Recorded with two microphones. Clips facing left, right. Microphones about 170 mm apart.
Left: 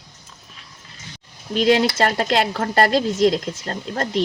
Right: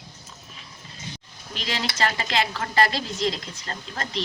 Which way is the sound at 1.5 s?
50° left (ahead or behind).